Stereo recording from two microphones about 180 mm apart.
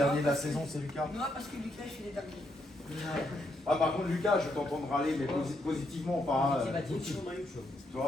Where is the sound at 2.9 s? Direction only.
Centre (ahead or behind).